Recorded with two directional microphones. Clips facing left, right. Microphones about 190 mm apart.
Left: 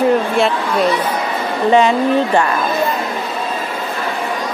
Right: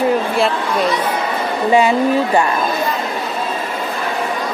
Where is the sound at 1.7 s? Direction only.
10° right (ahead or behind).